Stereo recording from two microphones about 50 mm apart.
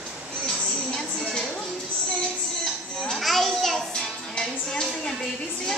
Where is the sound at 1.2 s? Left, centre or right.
Centre.